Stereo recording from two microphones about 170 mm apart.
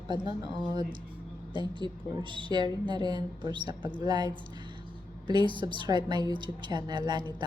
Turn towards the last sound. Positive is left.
turn(degrees=-25)  # may be behind; listen again after turning